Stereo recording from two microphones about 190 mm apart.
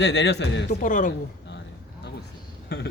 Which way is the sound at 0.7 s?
45° left (ahead or behind).